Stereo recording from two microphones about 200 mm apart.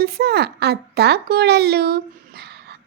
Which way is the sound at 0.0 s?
50° right (ahead or behind).